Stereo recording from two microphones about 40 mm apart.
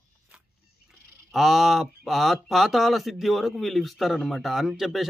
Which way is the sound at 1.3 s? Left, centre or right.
Centre.